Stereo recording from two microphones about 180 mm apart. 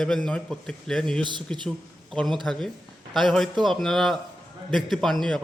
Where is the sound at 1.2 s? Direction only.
25° right (ahead or behind).